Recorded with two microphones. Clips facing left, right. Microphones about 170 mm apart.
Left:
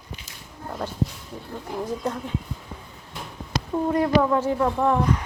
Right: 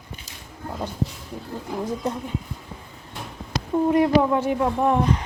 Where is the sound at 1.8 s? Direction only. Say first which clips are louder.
Right 1 dB; 20° right (ahead or behind).